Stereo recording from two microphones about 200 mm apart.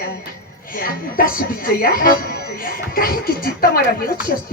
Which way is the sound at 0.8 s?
45° left (ahead or behind).